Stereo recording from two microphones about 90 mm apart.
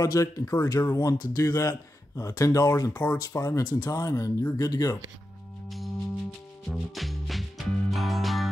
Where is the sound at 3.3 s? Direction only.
35° left (ahead or behind).